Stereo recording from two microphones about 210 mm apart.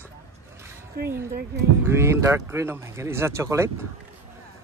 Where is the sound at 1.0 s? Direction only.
45° right (ahead or behind).